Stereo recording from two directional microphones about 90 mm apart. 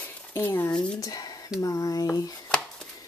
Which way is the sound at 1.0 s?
45° left (ahead or behind).